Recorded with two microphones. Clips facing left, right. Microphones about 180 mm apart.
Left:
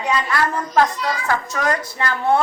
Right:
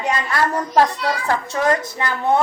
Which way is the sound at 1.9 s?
20° right (ahead or behind).